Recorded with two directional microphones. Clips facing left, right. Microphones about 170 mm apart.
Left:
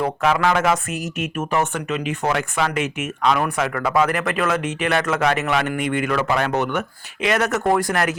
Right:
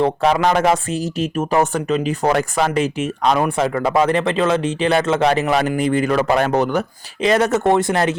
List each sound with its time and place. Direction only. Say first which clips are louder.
0.0 s speech: right 3 dB; 30° right (ahead or behind)